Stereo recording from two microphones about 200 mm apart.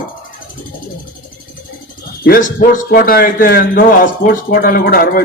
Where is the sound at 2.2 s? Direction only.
45° left (ahead or behind).